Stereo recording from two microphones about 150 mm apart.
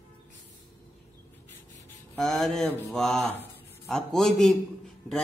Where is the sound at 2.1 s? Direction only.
5° left (ahead or behind).